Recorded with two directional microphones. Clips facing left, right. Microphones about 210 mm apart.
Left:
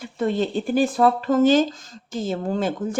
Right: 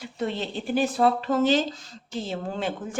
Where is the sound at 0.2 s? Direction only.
50° left (ahead or behind).